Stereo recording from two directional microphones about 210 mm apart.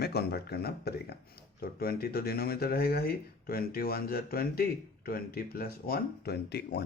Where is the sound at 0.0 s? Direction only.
50° left (ahead or behind).